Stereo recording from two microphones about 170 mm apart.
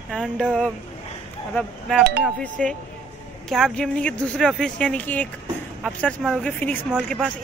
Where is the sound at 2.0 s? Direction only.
70° right (ahead or behind).